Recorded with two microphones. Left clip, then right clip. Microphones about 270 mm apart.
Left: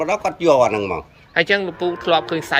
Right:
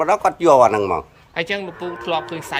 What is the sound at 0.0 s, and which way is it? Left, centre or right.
Speech, centre.